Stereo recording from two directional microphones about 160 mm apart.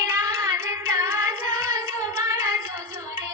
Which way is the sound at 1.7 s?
20° right (ahead or behind).